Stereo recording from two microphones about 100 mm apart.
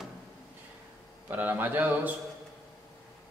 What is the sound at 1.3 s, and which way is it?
Speech, 20° right (ahead or behind).